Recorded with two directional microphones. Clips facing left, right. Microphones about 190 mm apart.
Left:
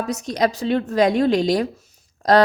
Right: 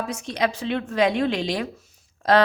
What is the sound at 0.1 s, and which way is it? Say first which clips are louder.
A woman's voice: left 4 dB; 40° left (ahead or behind).